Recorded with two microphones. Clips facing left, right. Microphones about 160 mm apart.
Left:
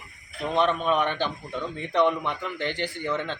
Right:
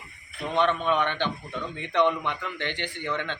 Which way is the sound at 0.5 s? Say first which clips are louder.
Left 1 dB; 5° left (ahead or behind).